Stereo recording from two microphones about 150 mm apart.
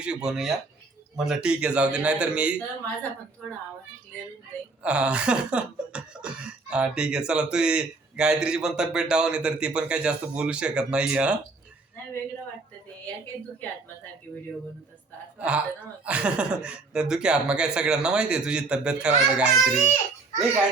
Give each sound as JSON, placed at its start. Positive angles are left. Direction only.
{"t": 0.0, "sound": "speech", "side_deg": -5}
{"t": 1.1, "sound": "cough", "side_deg": -5}
{"t": 4.8, "sound": "cough", "side_deg": -10}
{"t": 15.4, "sound": "cough", "side_deg": -10}
{"t": 16.0, "sound": "speech", "side_deg": -5}
{"t": 19.7, "sound": "a child's voice", "side_deg": 50}